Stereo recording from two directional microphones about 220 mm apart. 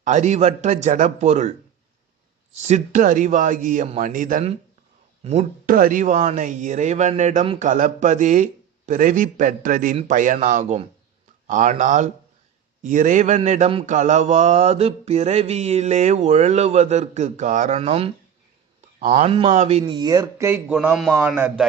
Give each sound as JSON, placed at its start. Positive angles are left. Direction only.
{"t": 0.0, "sound": "mantra", "side_deg": -35}
{"t": 2.6, "sound": "mantra", "side_deg": -30}
{"t": 19.8, "sound": "a man's voice", "side_deg": -15}